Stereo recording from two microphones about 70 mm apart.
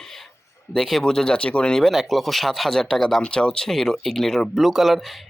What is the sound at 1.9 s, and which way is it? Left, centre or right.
Speech, centre.